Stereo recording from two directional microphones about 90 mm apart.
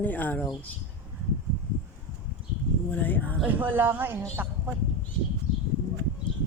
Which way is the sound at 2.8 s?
20° left (ahead or behind).